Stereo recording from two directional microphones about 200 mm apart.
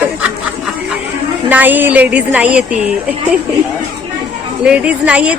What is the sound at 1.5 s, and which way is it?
A woman's voice, 10° right (ahead or behind).